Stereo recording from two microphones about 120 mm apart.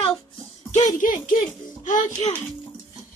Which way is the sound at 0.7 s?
90° left.